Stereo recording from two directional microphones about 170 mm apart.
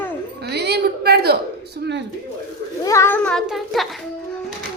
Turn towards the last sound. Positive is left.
turn(degrees=0)  # may be behind; listen again after turning